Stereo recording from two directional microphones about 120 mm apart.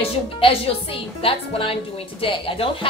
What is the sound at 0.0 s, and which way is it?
A woman's voice, 50° left (ahead or behind).